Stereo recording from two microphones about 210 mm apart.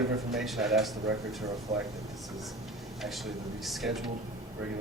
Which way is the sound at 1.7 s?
35° right (ahead or behind).